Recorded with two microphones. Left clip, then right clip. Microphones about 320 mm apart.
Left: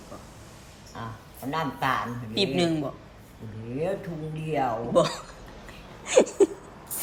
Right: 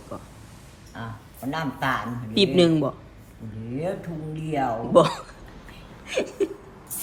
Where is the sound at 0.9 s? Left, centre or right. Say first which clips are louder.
Right 1 dB; centre.